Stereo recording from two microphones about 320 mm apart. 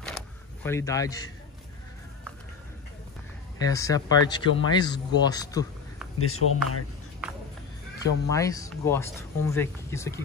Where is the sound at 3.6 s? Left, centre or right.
Centre.